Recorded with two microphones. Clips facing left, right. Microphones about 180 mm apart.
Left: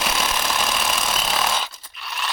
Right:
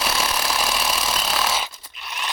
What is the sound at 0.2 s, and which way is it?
Jackhammer, 5° right (ahead or behind).